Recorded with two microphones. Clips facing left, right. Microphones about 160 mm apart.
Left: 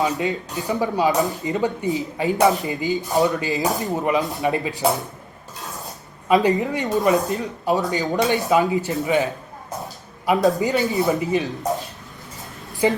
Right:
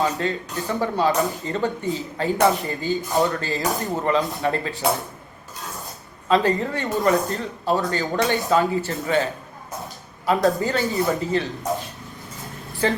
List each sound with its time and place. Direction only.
0.0 s speech: 15° left (ahead or behind)
4.8 s speech: centre (ahead or behind)
6.2 s speech: 15° left (ahead or behind)
12.8 s speech: 15° left (ahead or behind)